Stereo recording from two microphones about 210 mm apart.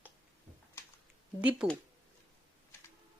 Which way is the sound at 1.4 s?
5° right (ahead or behind).